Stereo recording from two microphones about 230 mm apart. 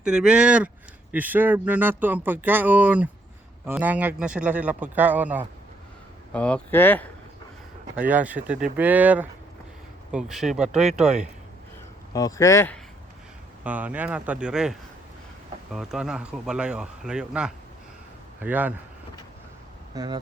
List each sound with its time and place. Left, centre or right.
0.0 s speech: centre
6.3 s speech: centre
7.9 s speech: centre
12.1 s speech: centre
13.7 s speech: centre
19.9 s speech: centre